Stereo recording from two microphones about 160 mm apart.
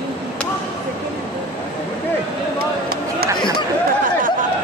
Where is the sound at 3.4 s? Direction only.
30° left (ahead or behind).